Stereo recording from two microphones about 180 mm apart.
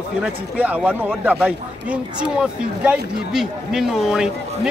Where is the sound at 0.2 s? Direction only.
10° right (ahead or behind).